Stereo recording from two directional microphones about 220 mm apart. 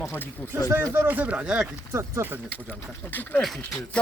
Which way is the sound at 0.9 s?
10° right (ahead or behind).